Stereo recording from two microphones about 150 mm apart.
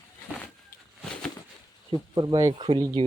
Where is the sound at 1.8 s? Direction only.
30° right (ahead or behind).